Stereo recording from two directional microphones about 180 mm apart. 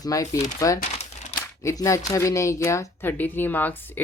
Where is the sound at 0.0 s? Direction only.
20° left (ahead or behind).